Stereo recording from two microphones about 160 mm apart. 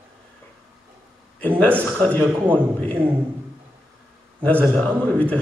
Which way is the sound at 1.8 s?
5° left (ahead or behind).